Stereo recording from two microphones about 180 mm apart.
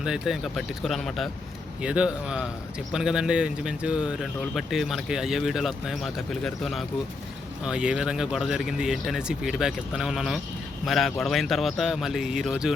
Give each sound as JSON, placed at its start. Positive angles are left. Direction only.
{"t": 0.0, "sound": "a man's voice", "side_deg": -5}